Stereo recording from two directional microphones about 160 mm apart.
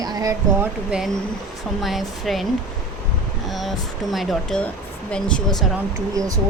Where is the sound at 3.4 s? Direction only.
Centre (ahead or behind).